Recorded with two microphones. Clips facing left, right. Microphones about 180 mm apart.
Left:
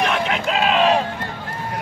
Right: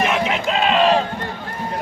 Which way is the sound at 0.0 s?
Centre (ahead or behind).